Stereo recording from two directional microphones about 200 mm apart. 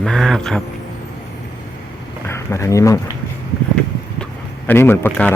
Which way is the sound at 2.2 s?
15° left (ahead or behind).